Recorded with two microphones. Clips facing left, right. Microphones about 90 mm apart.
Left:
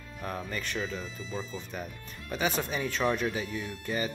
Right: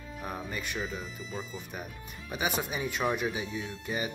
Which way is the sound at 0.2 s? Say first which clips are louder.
Left 2 dB; 10° right (ahead or behind).